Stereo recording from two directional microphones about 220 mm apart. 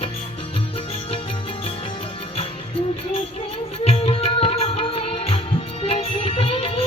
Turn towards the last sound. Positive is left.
turn(degrees=25)  # may be behind; listen again after turning